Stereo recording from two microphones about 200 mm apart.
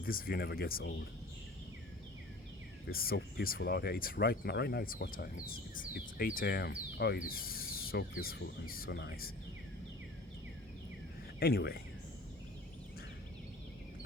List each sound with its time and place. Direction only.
0.0 s speech: 45° left (ahead or behind)
2.9 s speech: 50° left (ahead or behind)
11.3 s speech: 50° left (ahead or behind)